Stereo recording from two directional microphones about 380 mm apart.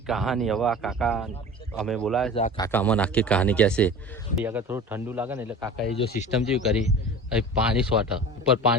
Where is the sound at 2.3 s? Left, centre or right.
Centre.